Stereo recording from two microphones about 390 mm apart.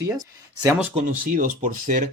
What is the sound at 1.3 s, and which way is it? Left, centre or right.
Speech, centre.